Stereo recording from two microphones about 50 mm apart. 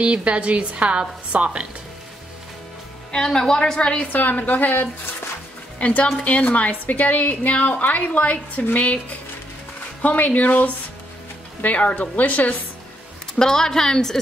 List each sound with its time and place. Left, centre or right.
0.0 s a woman's voice: right
3.1 s a woman's voice: centre
4.1 s a woman's voice: left
5.8 s a woman's voice: left
10.0 s a woman's voice: left
13.4 s a woman's voice: centre